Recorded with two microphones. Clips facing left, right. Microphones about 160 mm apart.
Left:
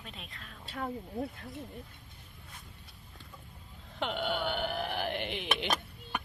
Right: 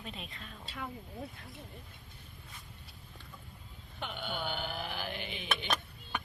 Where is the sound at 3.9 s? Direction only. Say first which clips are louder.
Left 7 dB; 85° left; by 5.5 s 70° left (ahead or behind).